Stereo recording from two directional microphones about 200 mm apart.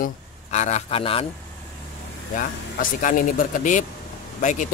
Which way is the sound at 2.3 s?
40° left (ahead or behind).